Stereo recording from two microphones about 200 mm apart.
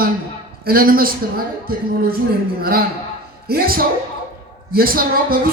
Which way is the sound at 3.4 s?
50° right (ahead or behind).